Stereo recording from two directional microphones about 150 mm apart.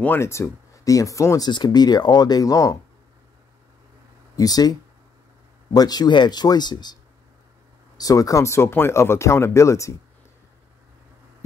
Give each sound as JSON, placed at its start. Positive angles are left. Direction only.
{"t": 0.0, "sound": "speech", "side_deg": 15}
{"t": 4.4, "sound": "speech", "side_deg": 25}
{"t": 8.0, "sound": "speech", "side_deg": 25}